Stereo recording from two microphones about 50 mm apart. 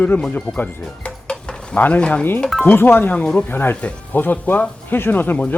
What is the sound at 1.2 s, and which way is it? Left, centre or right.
Stir, centre.